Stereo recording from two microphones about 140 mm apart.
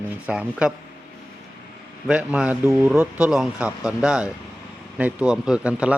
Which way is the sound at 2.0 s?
5° right (ahead or behind).